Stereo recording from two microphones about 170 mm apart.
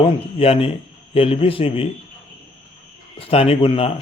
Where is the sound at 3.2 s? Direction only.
35° left (ahead or behind).